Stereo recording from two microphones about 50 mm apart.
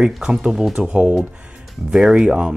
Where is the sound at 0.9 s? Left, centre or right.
Right.